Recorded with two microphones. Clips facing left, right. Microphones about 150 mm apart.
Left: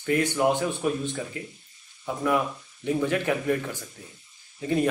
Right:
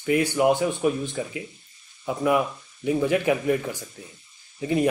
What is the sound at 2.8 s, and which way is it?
A man's voice, 10° right (ahead or behind).